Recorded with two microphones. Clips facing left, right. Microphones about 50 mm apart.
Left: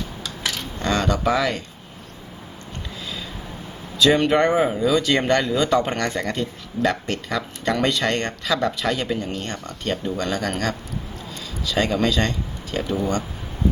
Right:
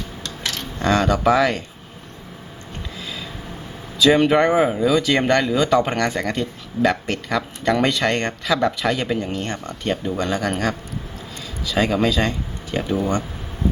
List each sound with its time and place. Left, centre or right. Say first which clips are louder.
0.2 s a sound: right 1 dB; centre
0.8 s speech: right 4 dB; centre
4.0 s speech: right 2 dB; centre
8.6 s speech: right 2 dB; centre